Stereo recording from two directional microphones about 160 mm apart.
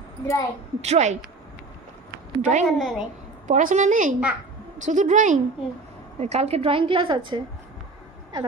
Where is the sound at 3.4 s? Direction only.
50° right (ahead or behind).